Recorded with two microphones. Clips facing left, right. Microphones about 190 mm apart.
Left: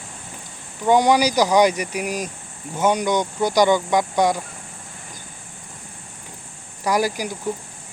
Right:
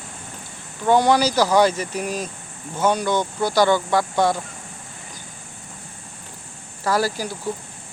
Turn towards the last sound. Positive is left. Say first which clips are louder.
# left 1 dB
turn(degrees=15)  # may be behind; listen again after turning